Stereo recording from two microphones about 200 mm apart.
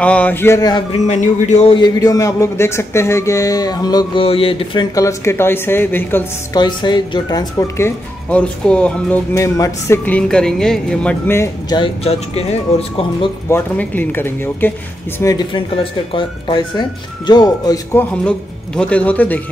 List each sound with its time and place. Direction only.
0.0 s speech: 5° left (ahead or behind)
0.9 s speech: 35° left (ahead or behind)
1.8 s speech: 15° left (ahead or behind)
6.6 s speech: 20° left (ahead or behind)
11.8 s speech: 30° left (ahead or behind)
13.5 s speech: 10° left (ahead or behind)
18.8 s speech: 5° left (ahead or behind)